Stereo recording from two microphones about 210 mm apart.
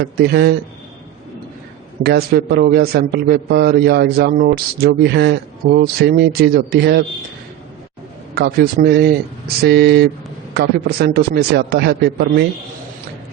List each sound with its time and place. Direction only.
0.0 s a man's voice: 50° right (ahead or behind)
2.0 s a man's voice: 50° right (ahead or behind)
8.4 s a man's voice: 45° right (ahead or behind)